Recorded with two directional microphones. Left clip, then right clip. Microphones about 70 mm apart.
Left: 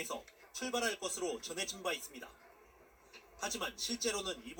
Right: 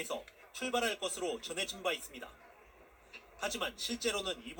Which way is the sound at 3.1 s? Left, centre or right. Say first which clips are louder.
Right 2 dB; right.